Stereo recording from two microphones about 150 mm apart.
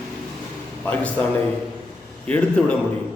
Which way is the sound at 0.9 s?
10° left (ahead or behind).